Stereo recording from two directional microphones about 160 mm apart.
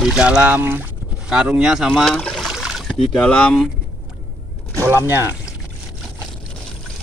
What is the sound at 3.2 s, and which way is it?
Speech, 5° left (ahead or behind).